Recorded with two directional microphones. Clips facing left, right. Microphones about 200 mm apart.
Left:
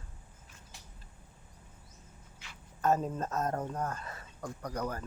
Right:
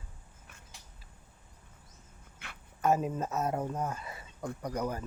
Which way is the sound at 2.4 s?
60° right (ahead or behind).